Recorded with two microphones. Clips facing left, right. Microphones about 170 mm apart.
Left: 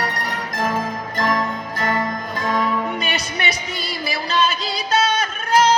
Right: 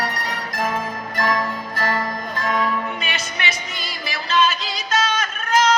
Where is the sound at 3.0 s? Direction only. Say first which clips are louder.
Left 3 dB; 35° left (ahead or behind).